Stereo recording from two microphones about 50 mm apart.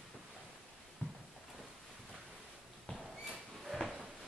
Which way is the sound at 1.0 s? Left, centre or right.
Left.